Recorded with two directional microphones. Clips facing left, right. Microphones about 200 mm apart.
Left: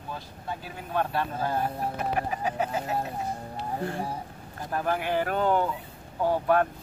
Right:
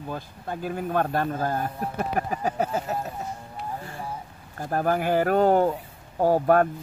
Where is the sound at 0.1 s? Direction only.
50° right (ahead or behind).